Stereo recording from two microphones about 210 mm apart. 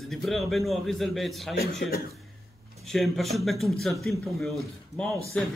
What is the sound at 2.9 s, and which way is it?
A man's voice, centre (ahead or behind).